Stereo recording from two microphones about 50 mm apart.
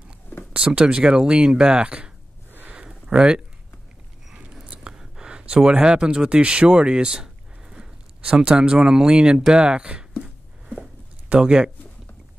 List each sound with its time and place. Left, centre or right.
0.5 s speech: right
2.7 s a sound: centre
4.4 s speech: right
11.3 s speech: centre